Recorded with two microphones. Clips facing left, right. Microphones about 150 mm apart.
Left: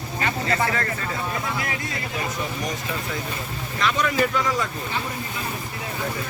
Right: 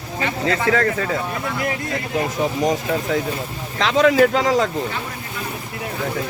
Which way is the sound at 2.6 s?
90° right.